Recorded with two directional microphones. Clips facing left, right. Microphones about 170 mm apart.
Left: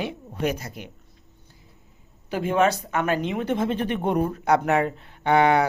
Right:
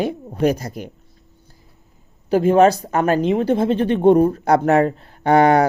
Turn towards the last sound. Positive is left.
turn(degrees=-40)  # may be behind; listen again after turning